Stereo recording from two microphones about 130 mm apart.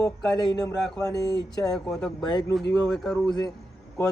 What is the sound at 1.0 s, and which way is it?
Speech, 30° left (ahead or behind).